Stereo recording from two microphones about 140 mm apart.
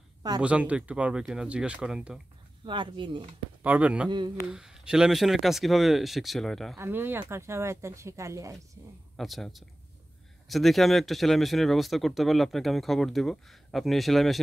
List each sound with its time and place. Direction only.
0.4 s speech: 10° right (ahead or behind)
2.6 s speech: 35° right (ahead or behind)
3.6 s speech: 10° right (ahead or behind)
6.8 s speech: 15° right (ahead or behind)
9.1 s speech: centre (ahead or behind)